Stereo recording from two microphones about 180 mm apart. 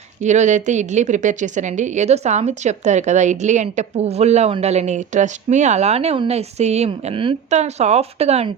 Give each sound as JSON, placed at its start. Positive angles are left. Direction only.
{"t": 0.2, "sound": "speech", "side_deg": -40}